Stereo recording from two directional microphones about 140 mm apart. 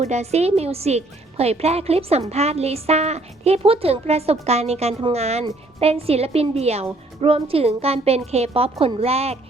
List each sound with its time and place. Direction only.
0.0 s a woman's voice: 50° right (ahead or behind)